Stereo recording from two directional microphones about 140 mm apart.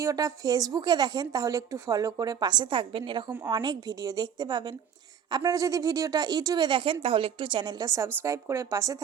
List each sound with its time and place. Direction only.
0.0 s speech: 25° right (ahead or behind)